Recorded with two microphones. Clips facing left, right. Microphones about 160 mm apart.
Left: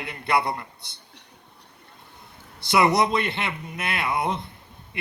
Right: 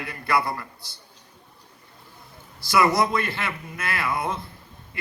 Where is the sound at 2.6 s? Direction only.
20° left (ahead or behind).